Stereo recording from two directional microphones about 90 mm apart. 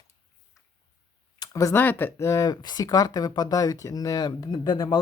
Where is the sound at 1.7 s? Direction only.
20° left (ahead or behind).